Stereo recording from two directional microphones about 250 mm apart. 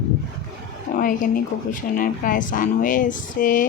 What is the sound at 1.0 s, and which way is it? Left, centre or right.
A woman's voice, left.